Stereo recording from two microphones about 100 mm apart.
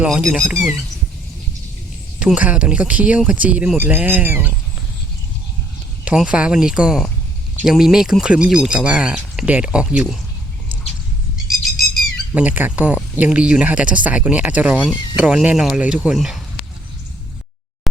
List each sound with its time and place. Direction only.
0.1 s speech: centre (ahead or behind)
2.1 s speech: 10° right (ahead or behind)
6.1 s speech: 10° right (ahead or behind)
12.3 s speech: 15° right (ahead or behind)